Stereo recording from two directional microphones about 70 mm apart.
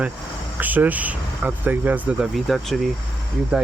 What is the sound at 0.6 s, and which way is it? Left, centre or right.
Speech, right.